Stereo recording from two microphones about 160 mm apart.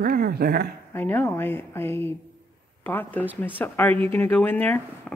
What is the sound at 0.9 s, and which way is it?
Speech, 15° left (ahead or behind).